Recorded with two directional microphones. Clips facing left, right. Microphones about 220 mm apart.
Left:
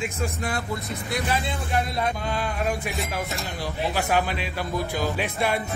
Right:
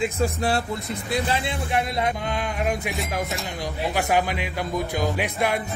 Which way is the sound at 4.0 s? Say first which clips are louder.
Right 3 dB; 15° right (ahead or behind).